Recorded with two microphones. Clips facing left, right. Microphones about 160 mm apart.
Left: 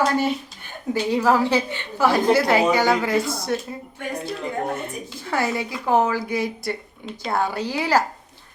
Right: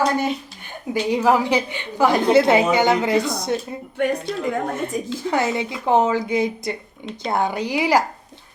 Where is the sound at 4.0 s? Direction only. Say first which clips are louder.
Right 11 dB; 70° right (ahead or behind).